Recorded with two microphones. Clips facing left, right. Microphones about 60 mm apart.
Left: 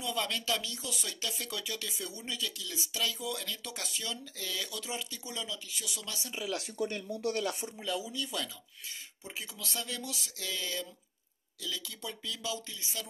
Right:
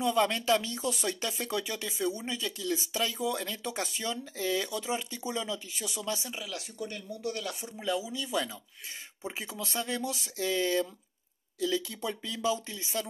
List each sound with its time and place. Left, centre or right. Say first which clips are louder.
0.0 s speech: right 8 dB; right
2.6 s speech: right 8 dB; right
6.5 s speech: left 7 dB; left
7.7 s speech: right 4 dB; centre
9.3 s speech: right 3 dB; right